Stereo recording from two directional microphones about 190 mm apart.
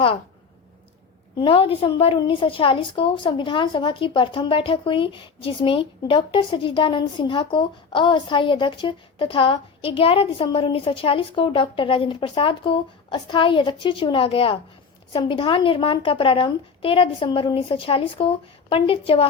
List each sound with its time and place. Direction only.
1.4 s a woman's voice: 30° left (ahead or behind)